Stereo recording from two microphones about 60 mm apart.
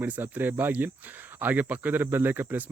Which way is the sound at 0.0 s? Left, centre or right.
Right.